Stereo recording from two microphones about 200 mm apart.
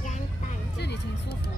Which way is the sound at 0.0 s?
35° left (ahead or behind).